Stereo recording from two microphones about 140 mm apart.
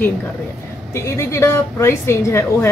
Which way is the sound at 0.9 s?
20° left (ahead or behind).